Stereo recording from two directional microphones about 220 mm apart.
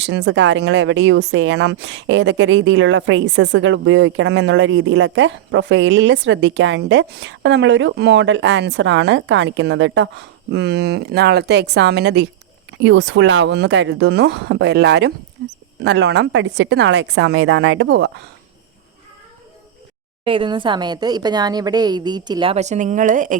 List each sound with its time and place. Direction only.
0.0 s speech: 50° right (ahead or behind)
20.2 s a woman's voice: 25° right (ahead or behind)